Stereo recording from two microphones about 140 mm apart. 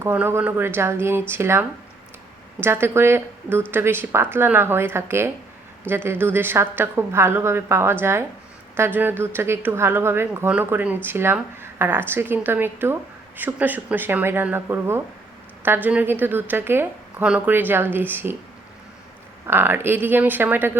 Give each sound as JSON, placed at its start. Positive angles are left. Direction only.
{"t": 0.0, "sound": "speech", "side_deg": -15}
{"t": 19.5, "sound": "speech", "side_deg": -15}